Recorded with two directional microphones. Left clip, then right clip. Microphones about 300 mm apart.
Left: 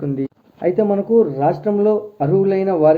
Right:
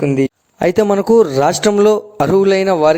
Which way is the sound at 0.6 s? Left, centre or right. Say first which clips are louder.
Right 4 dB; right.